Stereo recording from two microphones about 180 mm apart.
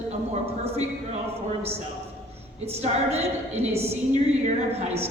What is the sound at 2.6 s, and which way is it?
A woman's voice, 35° right (ahead or behind).